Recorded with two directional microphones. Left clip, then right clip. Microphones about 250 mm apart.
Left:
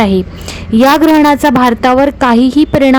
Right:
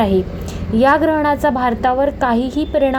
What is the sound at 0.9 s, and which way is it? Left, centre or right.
Speech, left.